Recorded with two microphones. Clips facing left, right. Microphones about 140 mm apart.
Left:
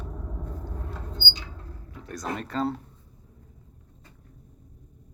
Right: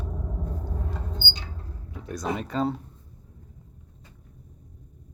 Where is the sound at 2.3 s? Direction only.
5° right (ahead or behind).